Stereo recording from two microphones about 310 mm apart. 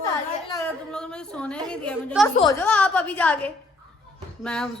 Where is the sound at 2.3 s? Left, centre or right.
Centre.